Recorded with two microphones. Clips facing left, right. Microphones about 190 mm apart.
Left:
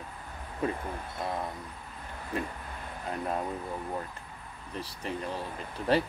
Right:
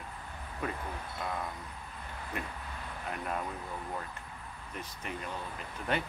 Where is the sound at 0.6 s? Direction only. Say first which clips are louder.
Left 6 dB; 30° left (ahead or behind).